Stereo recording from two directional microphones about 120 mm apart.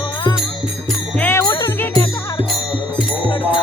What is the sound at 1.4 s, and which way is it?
Music, 35° left (ahead or behind).